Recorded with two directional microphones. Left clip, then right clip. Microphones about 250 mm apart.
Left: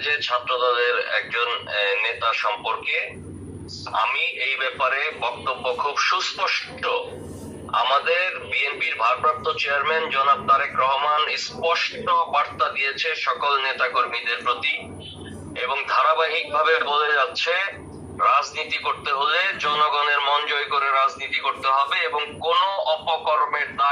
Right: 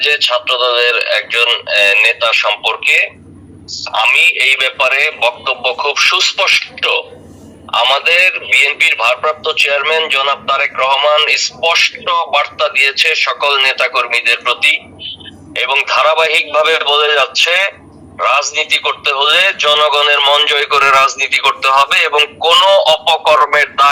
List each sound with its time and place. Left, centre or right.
0.0 s a man's voice: right